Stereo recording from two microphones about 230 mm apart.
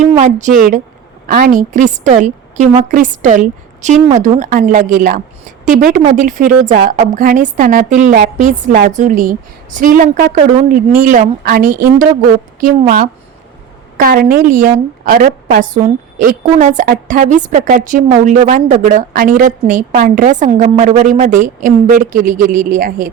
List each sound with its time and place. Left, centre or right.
0.2 s a woman's voice: right